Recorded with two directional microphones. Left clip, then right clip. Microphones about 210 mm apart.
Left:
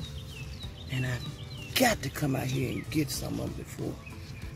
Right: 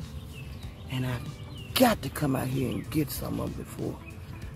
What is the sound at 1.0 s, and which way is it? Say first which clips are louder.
Speech: even; centre (ahead or behind).